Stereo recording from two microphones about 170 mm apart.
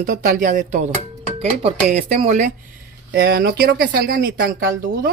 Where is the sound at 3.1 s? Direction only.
60° right (ahead or behind).